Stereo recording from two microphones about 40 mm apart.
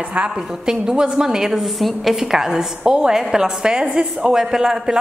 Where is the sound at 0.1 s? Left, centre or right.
Right.